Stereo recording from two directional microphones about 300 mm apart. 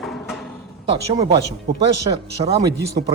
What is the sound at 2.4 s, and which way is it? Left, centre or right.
Speech, centre.